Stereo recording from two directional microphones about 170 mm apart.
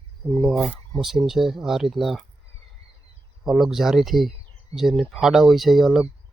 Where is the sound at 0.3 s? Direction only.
5° left (ahead or behind).